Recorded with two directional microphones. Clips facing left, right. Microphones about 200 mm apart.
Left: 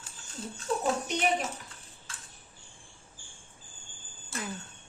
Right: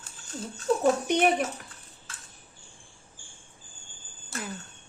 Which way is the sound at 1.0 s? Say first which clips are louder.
Right 7 dB; 55° right (ahead or behind).